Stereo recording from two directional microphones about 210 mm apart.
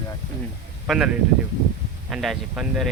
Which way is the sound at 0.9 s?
5° right (ahead or behind).